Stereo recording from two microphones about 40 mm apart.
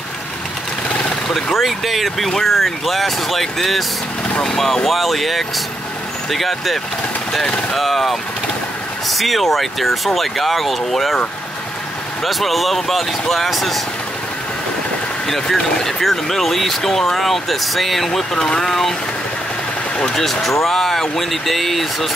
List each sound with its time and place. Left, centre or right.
0.8 s a sound: left
1.3 s speech: centre
4.4 s speech: centre
4.8 s speech: centre
12.2 s speech: centre
15.2 s speech: centre
20.4 s speech: centre